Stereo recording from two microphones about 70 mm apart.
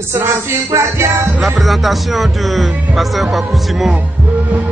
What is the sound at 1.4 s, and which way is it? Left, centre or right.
Speech, centre.